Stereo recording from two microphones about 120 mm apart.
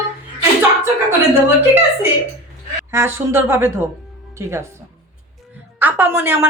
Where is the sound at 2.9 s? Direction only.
20° right (ahead or behind).